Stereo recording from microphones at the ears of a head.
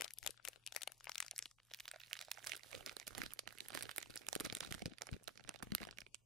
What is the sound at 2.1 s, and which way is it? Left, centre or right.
Crumpling, right.